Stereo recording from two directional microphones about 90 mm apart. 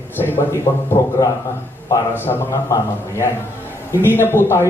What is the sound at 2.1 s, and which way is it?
Speech, 25° left (ahead or behind).